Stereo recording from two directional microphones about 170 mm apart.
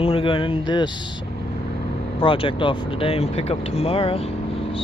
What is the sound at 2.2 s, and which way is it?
Speech, 30° left (ahead or behind).